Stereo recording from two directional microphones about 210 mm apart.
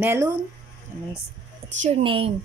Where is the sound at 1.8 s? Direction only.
30° right (ahead or behind).